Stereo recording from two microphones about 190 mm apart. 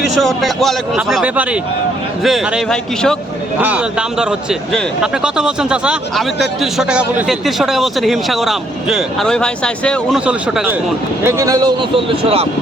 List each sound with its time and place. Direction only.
0.1 s a man's voice: centre (ahead or behind)
10.2 s speech: 5° right (ahead or behind); by 12.5 s 30° right (ahead or behind)